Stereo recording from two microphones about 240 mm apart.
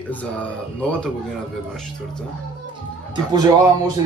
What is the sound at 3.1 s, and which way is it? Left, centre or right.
Speech, centre.